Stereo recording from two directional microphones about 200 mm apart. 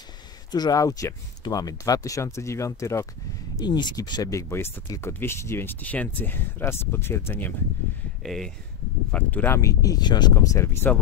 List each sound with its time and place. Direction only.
0.5 s speech: 20° left (ahead or behind)